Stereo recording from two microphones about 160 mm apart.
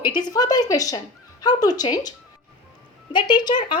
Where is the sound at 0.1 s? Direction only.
25° left (ahead or behind).